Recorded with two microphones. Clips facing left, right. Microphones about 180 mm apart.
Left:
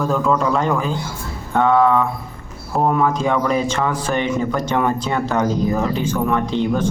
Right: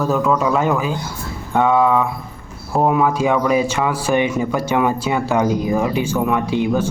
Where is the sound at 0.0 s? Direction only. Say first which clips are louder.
Right 1 dB; 5° right (ahead or behind).